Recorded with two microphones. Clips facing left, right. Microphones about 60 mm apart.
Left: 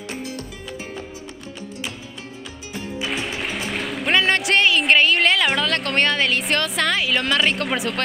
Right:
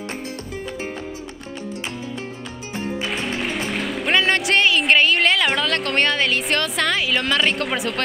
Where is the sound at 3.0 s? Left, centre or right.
Centre.